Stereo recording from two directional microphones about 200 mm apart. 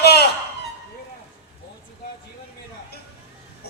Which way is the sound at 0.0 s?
55° left (ahead or behind).